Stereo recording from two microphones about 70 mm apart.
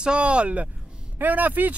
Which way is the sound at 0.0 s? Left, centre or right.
Centre.